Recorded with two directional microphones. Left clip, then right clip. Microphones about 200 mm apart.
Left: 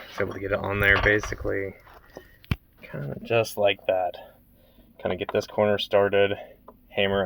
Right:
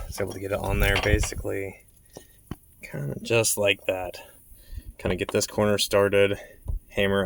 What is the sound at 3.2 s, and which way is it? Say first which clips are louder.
Speech: even; 40° right (ahead or behind).